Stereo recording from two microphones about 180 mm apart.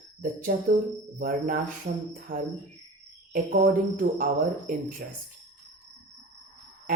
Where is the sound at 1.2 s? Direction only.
50° right (ahead or behind).